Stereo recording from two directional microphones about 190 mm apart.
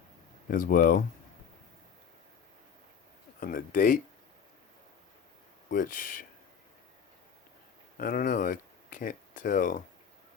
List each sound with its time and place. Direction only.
0.4 s speech: 45° left (ahead or behind)
3.4 s speech: 45° left (ahead or behind)
5.7 s speech: 45° left (ahead or behind)
7.9 s speech: 50° left (ahead or behind)